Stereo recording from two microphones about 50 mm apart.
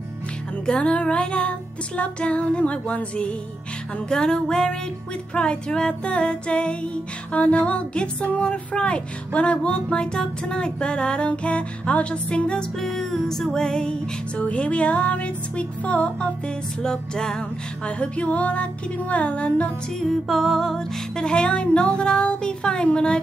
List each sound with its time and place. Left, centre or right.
0.7 s music: left
4.1 s music: centre
12.8 s music: centre; by 16.3 s left
16.8 s music: centre
20.0 s music: centre
21.2 s music: centre